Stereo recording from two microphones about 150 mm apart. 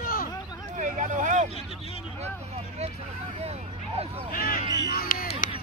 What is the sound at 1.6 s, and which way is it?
Vehicle, 40° left (ahead or behind).